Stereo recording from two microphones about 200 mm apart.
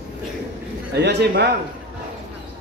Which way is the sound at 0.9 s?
55° right (ahead or behind).